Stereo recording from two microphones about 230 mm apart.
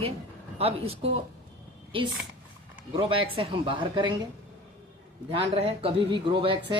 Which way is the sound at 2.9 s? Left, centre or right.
Right.